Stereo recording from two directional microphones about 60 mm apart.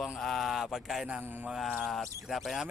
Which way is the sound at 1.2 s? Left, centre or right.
Right.